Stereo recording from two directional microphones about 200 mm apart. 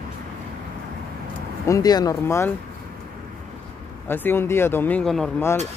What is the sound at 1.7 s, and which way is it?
Speech, 20° left (ahead or behind).